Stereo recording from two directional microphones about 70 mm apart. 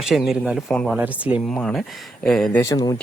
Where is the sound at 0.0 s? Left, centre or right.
Centre.